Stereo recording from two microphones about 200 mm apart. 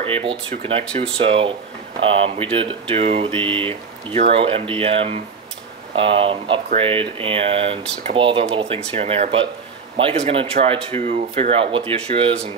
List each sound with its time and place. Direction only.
0.0 s speech: 25° right (ahead or behind)